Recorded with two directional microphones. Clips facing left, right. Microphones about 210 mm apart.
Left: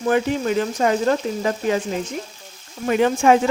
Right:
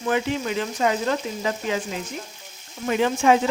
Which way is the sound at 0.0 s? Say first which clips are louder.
Left 4 dB; 45° left (ahead or behind).